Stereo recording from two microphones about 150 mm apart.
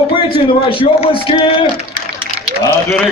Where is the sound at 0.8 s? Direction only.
40° left (ahead or behind).